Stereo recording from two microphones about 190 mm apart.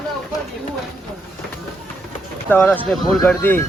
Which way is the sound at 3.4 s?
10° left (ahead or behind).